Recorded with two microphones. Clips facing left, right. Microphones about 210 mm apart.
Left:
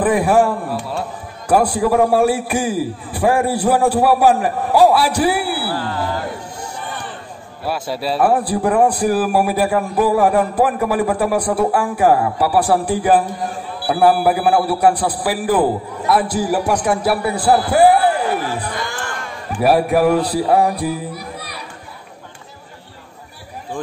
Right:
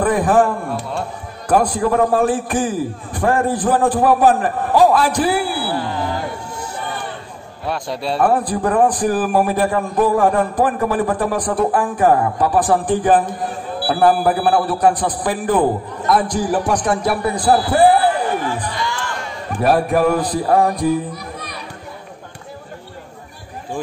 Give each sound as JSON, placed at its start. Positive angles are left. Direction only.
{"t": 0.0, "sound": "a man's voice", "side_deg": 10}
{"t": 5.7, "sound": "music", "side_deg": -20}
{"t": 7.6, "sound": "a man's voice", "side_deg": 5}
{"t": 17.8, "sound": "a sound", "side_deg": 10}
{"t": 18.6, "sound": "music", "side_deg": 50}
{"t": 19.6, "sound": "a man's voice", "side_deg": 10}